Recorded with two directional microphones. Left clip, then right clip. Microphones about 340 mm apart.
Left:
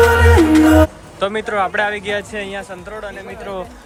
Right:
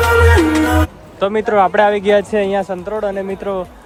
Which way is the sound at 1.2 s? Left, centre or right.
Centre.